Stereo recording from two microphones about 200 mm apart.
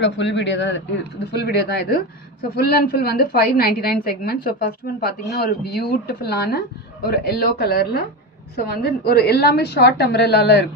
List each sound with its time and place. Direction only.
0.0 s a woman's voice: 60° left (ahead or behind)